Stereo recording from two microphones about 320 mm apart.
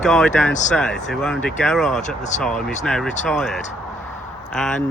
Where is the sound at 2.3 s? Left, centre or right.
Left.